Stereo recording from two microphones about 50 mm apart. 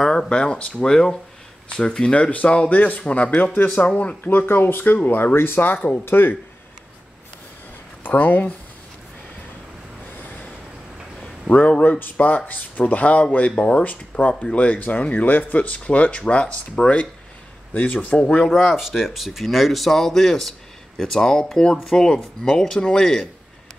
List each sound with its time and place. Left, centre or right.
0.0 s speech: centre
4.2 s speech: left
8.0 s speech: left
11.5 s a man's voice: centre
11.8 s speech: left
13.8 s speech: left
18.6 s speech: centre